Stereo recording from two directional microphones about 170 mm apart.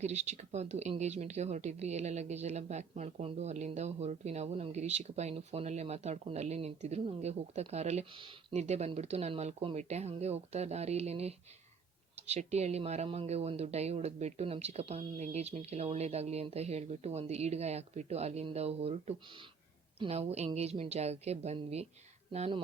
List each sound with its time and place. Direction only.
0.0 s speech: 40° right (ahead or behind)
8.5 s speech: 40° right (ahead or behind)